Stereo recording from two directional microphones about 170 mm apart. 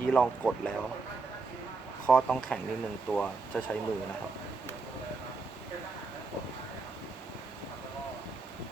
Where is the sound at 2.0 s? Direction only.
5° left (ahead or behind).